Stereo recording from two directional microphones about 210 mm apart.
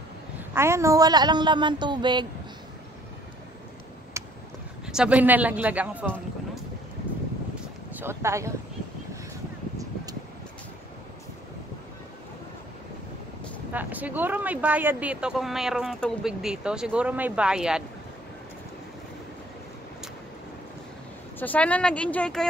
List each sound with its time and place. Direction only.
0.6 s a woman's voice: 15° right (ahead or behind)
4.2 s a sound: 15° right (ahead or behind)
4.8 s speech: 5° right (ahead or behind)
7.9 s speech: 10° right (ahead or behind)
13.7 s speech: 10° right (ahead or behind)
21.4 s speech: 5° left (ahead or behind)